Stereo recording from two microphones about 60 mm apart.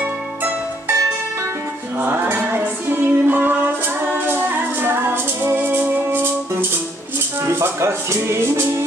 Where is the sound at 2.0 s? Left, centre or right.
Right.